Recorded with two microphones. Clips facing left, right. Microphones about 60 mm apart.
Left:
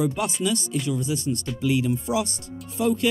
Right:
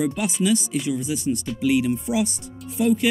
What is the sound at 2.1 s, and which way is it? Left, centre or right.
Speech, left.